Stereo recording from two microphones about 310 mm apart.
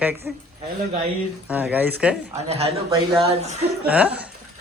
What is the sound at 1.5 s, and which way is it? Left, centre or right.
Speech, centre.